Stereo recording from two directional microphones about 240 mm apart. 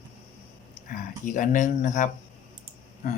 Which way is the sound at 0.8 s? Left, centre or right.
Left.